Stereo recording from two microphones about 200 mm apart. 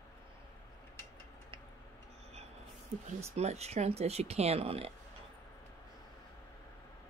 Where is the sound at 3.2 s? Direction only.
30° right (ahead or behind).